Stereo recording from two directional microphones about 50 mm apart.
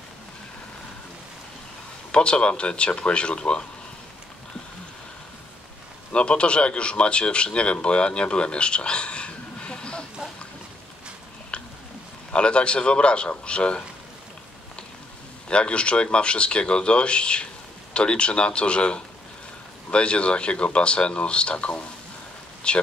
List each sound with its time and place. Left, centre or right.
2.1 s speech: left
6.1 s speech: left
11.5 s a sound: left
12.3 s speech: left
15.4 s speech: left